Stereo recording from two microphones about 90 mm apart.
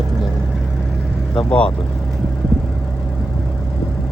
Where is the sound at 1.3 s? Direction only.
10° left (ahead or behind).